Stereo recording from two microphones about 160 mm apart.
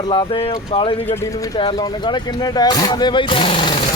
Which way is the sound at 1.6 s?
30° left (ahead or behind).